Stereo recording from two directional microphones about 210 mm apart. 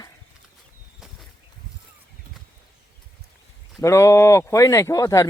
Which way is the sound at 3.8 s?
15° left (ahead or behind).